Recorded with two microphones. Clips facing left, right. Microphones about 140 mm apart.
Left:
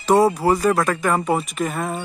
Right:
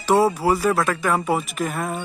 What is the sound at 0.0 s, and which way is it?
Speech, 5° right (ahead or behind).